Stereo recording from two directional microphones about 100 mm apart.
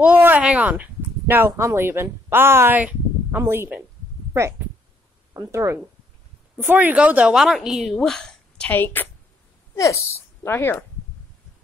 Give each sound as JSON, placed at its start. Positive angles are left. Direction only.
{"t": 0.0, "sound": "speech", "side_deg": -15}
{"t": 6.6, "sound": "a woman's voice", "side_deg": -20}
{"t": 8.7, "sound": "a woman's voice", "side_deg": 20}
{"t": 9.8, "sound": "speech", "side_deg": 30}